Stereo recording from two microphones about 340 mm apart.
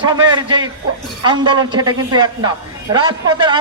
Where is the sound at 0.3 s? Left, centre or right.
Centre.